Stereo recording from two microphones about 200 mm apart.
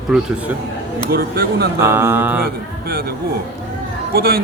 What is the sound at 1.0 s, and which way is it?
Speech, 50° right (ahead or behind).